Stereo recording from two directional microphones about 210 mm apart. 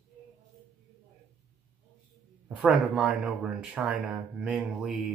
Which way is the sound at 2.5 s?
5° right (ahead or behind).